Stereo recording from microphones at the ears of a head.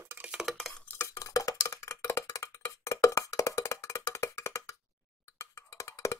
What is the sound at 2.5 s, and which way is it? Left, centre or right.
Cowbell, left.